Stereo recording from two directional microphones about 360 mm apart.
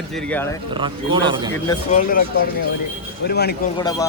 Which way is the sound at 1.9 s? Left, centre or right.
Left.